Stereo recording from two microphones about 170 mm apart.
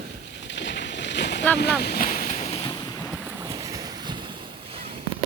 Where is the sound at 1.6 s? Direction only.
70° left (ahead or behind); by 2.6 s 40° left (ahead or behind).